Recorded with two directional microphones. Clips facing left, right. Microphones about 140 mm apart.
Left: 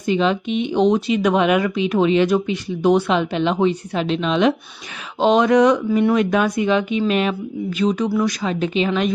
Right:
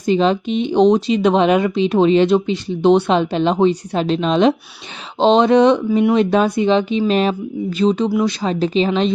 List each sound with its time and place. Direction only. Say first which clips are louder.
0.0 s speech: right 3 dB; 35° right (ahead or behind)